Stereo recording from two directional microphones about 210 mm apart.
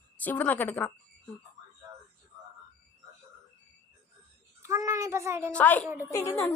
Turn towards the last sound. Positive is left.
turn(degrees=15)  # may be behind; listen again after turning